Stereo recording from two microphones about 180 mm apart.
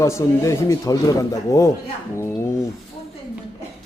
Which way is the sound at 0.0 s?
15° left (ahead or behind).